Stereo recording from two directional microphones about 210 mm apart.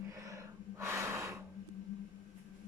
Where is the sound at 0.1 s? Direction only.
15° right (ahead or behind).